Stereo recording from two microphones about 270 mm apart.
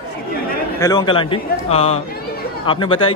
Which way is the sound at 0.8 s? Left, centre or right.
Centre.